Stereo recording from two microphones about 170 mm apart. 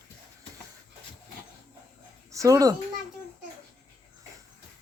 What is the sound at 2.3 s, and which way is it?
Speech, 20° right (ahead or behind).